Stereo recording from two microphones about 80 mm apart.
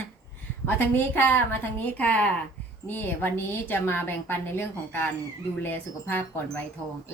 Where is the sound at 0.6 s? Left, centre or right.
Left.